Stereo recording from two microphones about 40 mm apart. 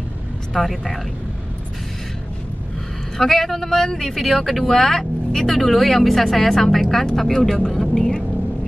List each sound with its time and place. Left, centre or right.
0.5 s speech: centre
3.2 s speech: centre